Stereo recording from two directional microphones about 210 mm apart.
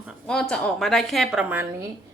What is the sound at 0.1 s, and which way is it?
A woman's voice, 5° left (ahead or behind).